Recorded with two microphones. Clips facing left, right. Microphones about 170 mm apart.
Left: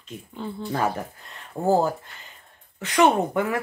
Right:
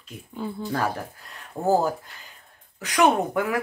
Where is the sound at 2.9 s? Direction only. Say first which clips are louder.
Left 1 dB; centre (ahead or behind).